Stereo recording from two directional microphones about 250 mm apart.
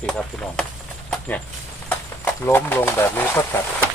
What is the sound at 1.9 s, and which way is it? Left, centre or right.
Speech, centre.